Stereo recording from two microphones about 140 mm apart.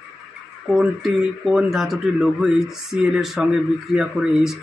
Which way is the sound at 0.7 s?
Centre (ahead or behind).